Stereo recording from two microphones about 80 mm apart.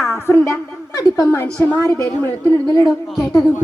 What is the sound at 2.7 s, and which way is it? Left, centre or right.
Speech, left.